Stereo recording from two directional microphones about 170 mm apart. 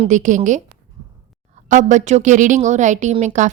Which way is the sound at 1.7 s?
45° right (ahead or behind).